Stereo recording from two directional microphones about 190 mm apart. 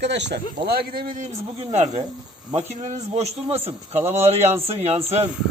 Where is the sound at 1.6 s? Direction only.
35° right (ahead or behind).